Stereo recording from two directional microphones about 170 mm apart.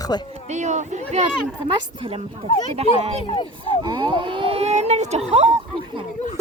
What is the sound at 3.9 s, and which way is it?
Speech, 25° right (ahead or behind).